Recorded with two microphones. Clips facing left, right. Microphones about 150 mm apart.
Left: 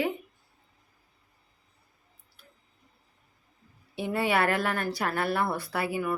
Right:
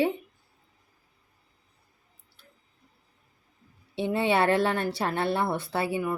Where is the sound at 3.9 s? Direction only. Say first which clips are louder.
Right 2 dB; 25° right (ahead or behind).